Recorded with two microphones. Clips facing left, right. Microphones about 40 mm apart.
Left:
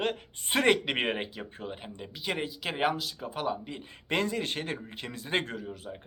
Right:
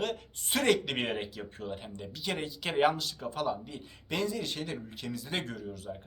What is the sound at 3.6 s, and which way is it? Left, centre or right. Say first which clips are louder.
Speech: left 3 dB; left.